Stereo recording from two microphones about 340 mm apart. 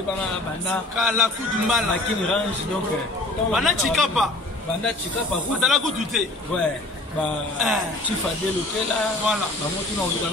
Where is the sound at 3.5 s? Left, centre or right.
Centre.